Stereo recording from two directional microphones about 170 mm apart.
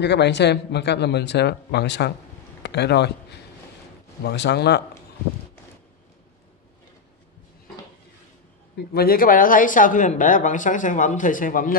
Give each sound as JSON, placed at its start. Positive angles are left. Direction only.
{"t": 0.0, "sound": "speech", "side_deg": 90}
{"t": 8.9, "sound": "speech", "side_deg": 60}